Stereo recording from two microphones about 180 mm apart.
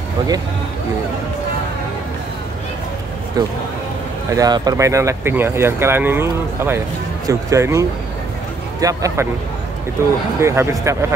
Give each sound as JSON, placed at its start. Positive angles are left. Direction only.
{"t": 3.4, "sound": "speech", "side_deg": -20}
{"t": 8.8, "sound": "speech", "side_deg": -15}
{"t": 10.4, "sound": "speech", "side_deg": -15}